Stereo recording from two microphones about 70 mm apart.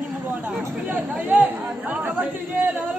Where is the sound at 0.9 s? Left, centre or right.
Right.